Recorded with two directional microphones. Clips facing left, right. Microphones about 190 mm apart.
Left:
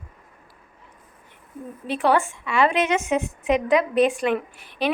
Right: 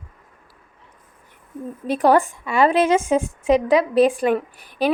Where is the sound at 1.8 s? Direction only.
40° right (ahead or behind).